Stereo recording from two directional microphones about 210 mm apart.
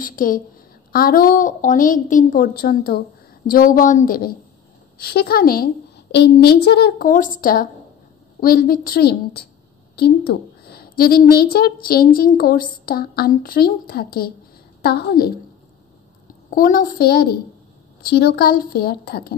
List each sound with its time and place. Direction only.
0.0 s a woman's voice: 40° left (ahead or behind)
16.4 s a woman's voice: 40° left (ahead or behind)